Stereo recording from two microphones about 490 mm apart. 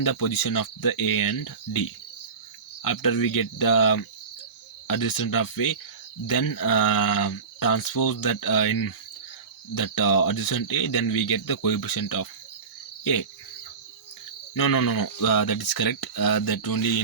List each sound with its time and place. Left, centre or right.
0.0 s speech: left
14.5 s speech: left